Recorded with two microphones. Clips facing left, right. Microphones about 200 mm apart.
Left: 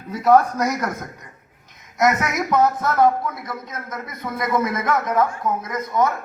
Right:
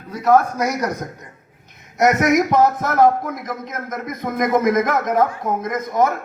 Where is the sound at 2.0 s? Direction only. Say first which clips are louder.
Right 6 dB; 65° right (ahead or behind).